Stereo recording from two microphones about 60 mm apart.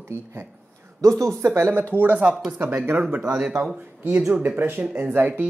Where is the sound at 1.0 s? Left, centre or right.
Right.